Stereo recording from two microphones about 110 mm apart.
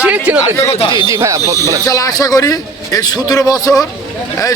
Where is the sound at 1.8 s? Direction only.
30° left (ahead or behind).